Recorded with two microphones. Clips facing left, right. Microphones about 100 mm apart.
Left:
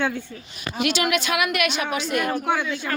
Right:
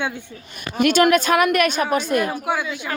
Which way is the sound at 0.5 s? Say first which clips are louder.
Right 7 dB; 50° right (ahead or behind).